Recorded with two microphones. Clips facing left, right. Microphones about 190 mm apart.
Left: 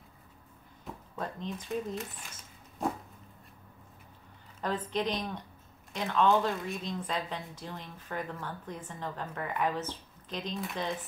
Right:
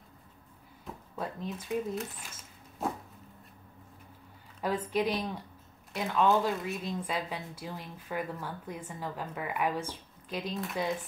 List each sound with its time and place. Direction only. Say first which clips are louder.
1.1 s speech: right 1 dB; 5° right (ahead or behind)
2.8 s a sound: left 1 dB; 5° right (ahead or behind)
4.6 s speech: right 2 dB; 10° right (ahead or behind)